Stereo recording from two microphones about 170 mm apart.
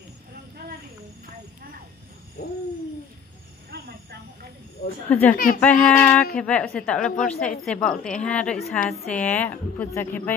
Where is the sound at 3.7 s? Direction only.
70° right (ahead or behind).